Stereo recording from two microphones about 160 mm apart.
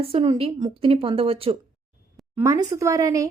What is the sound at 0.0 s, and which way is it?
Speech, 35° right (ahead or behind).